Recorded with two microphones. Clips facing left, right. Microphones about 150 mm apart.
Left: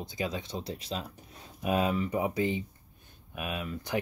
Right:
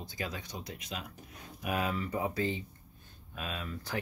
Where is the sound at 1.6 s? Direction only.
20° left (ahead or behind).